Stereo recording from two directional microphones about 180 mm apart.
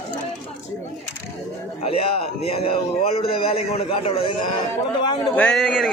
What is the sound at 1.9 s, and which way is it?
A man's voice, 30° left (ahead or behind).